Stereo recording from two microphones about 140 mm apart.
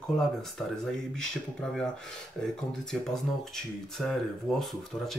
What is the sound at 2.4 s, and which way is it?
Speech, 5° left (ahead or behind).